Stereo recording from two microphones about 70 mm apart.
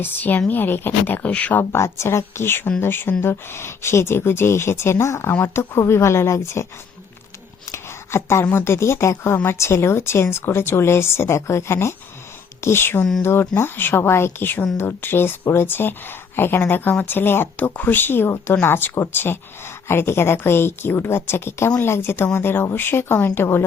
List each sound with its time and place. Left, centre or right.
0.0 s speech: left
1.7 s speech: left
7.7 s a sound: left
8.4 s speech: left